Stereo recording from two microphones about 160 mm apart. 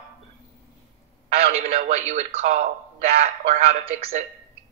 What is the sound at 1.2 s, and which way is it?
A man's voice, 45° right (ahead or behind).